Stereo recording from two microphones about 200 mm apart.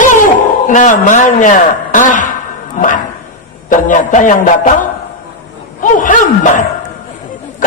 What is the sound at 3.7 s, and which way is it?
Music, 40° left (ahead or behind).